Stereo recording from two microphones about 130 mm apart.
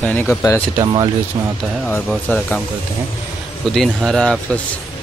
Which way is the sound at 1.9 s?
10° left (ahead or behind).